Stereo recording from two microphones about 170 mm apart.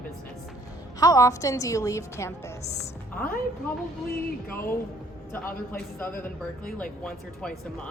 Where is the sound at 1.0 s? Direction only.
20° left (ahead or behind).